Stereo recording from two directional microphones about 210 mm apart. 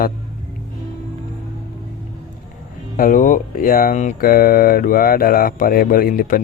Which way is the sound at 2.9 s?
40° left (ahead or behind).